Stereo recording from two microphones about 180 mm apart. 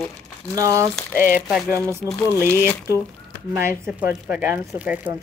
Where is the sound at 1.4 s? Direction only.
5° right (ahead or behind).